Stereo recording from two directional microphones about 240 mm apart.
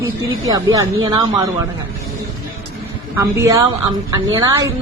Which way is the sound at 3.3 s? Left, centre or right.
Centre.